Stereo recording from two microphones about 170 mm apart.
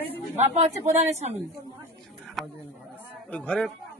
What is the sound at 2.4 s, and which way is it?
Speech, centre (ahead or behind).